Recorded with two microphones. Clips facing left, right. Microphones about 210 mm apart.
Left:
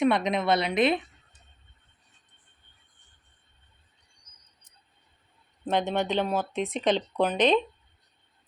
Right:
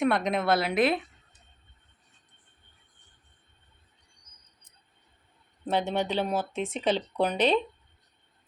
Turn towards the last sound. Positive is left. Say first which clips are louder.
# left 2 dB
turn(degrees=-10)  # may be behind; listen again after turning